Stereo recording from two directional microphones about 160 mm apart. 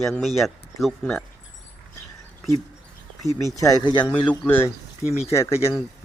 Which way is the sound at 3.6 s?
30° left (ahead or behind).